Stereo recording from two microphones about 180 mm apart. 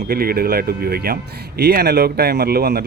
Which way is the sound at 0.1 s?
55° right (ahead or behind).